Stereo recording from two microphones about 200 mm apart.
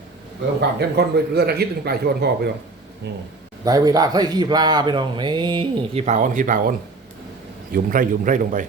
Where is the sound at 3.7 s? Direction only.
20° right (ahead or behind); by 8.6 s 40° right (ahead or behind).